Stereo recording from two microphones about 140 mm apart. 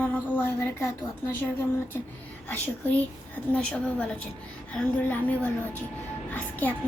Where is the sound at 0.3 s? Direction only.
15° left (ahead or behind).